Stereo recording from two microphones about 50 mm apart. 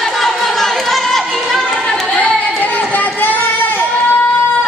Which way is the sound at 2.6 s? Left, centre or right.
Left.